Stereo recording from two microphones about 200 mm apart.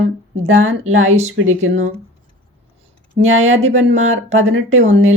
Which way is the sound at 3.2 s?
75° right (ahead or behind).